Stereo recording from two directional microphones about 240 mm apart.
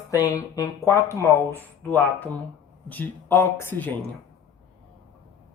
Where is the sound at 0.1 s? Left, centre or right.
Centre.